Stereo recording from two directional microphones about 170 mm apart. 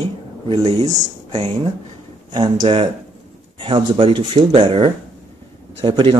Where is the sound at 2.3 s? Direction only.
30° right (ahead or behind).